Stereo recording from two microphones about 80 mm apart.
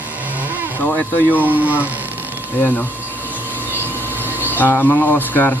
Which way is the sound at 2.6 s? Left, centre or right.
Left.